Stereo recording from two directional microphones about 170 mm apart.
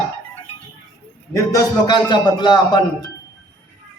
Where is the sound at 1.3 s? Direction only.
20° left (ahead or behind).